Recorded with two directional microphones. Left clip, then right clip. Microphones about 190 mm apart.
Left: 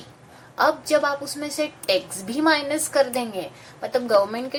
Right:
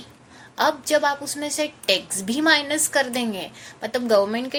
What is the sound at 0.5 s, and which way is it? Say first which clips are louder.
A woman's voice: left 1 dB; 35° right (ahead or behind).